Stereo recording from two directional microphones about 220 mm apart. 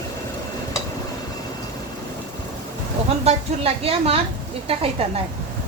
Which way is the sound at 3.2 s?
25° right (ahead or behind).